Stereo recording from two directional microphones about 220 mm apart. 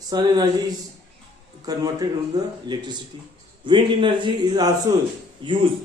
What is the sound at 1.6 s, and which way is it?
A man's voice, 15° right (ahead or behind).